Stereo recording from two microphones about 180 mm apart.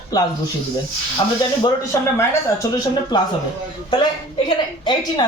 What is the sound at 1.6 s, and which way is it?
A woman's voice, 20° left (ahead or behind).